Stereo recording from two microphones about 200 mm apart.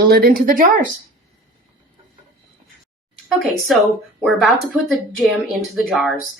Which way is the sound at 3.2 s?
Centre (ahead or behind).